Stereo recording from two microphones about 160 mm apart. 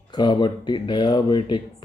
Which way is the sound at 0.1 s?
25° left (ahead or behind).